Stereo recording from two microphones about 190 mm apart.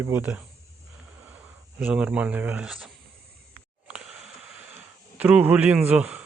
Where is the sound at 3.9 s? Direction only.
5° right (ahead or behind).